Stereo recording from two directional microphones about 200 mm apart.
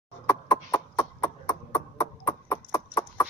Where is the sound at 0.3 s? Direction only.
15° left (ahead or behind).